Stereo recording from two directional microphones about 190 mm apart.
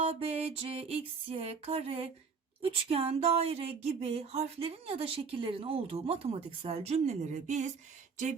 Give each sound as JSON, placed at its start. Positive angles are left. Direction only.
{"t": 0.0, "sound": "speech", "side_deg": -30}